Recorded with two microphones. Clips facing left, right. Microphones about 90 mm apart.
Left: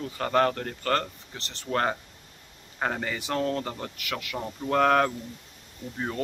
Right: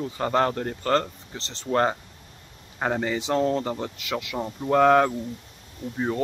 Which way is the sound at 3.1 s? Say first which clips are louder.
Right 5 dB; 25° right (ahead or behind).